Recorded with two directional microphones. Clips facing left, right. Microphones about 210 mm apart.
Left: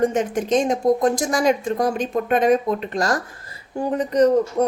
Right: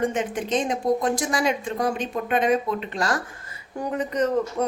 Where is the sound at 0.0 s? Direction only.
40° left (ahead or behind).